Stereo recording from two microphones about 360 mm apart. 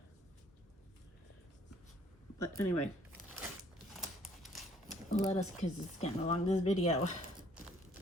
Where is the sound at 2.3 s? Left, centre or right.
Centre.